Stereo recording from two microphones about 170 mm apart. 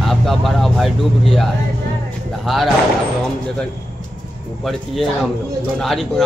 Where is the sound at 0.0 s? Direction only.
Centre (ahead or behind).